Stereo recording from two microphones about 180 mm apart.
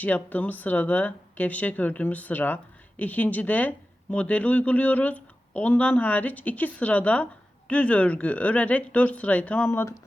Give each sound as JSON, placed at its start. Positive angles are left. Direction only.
{"t": 0.0, "sound": "speech", "side_deg": 10}